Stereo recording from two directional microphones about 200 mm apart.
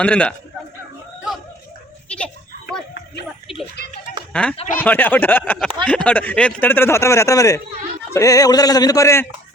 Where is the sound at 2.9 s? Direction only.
50° left (ahead or behind).